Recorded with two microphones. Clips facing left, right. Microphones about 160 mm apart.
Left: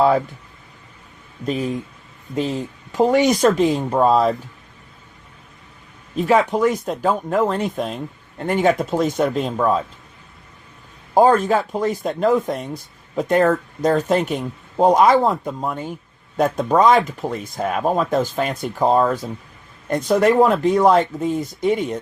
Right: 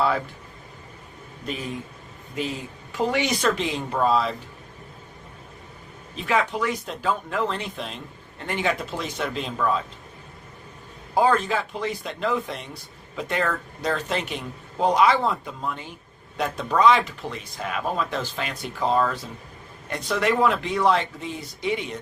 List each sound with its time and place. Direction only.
2.3 s speech: 45° left (ahead or behind)
6.1 s speech: 40° left (ahead or behind)
11.1 s speech: 45° left (ahead or behind)